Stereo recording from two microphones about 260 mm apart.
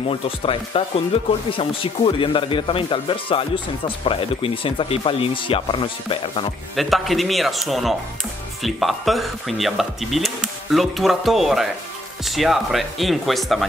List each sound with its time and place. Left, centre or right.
0.1 s speech: left
6.8 s speech: centre